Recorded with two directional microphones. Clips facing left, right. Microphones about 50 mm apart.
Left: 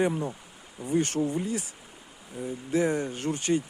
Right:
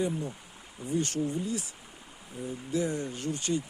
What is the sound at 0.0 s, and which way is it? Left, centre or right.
Speech, left.